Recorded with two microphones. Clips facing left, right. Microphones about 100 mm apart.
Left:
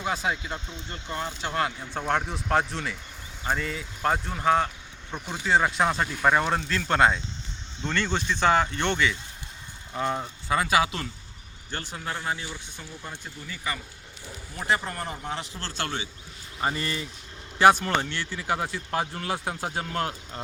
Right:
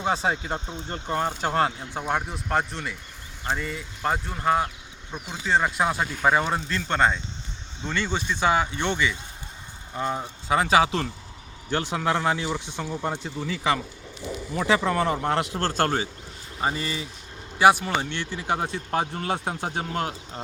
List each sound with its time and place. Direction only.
0.0 s speech: 30° right (ahead or behind)
1.8 s speech: 10° right (ahead or behind)
10.5 s speech: 25° right (ahead or behind)
11.7 s speech: 75° right (ahead or behind)
15.6 s a man's voice: 45° right (ahead or behind)
16.6 s speech: 20° right (ahead or behind)